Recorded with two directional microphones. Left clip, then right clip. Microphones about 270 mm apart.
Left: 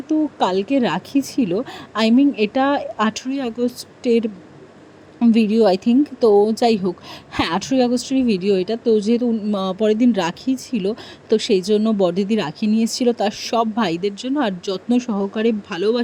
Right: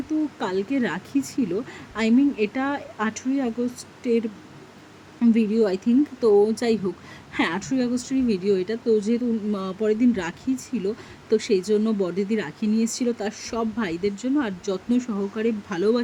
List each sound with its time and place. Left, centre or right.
0.1 s speech: centre